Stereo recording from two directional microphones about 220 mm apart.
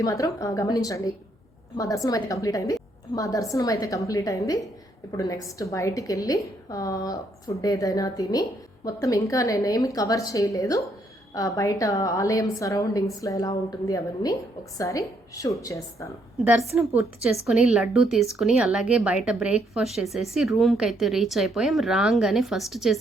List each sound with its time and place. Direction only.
0.0 s a woman's voice: 15° left (ahead or behind)
16.4 s a woman's voice: 10° right (ahead or behind)